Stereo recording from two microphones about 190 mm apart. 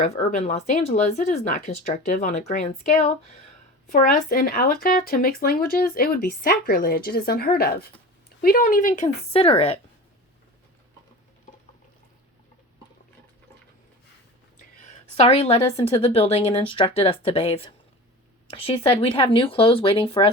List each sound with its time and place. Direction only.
0.0 s a woman's voice: 35° left (ahead or behind)
9.3 s a woman's voice: 30° left (ahead or behind)
14.8 s a woman's voice: 35° left (ahead or behind)